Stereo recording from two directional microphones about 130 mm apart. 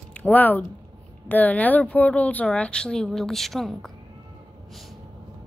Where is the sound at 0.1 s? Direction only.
10° left (ahead or behind).